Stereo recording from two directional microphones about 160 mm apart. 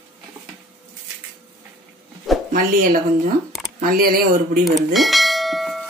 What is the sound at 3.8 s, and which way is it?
Speech, 65° right (ahead or behind).